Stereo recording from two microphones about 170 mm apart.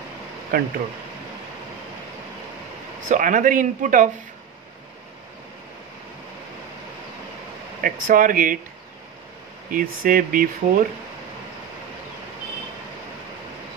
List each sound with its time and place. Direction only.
0.5 s speech: 60° right (ahead or behind)
3.1 s speech: 50° right (ahead or behind)
7.8 s speech: 55° right (ahead or behind)
9.7 s speech: 55° right (ahead or behind)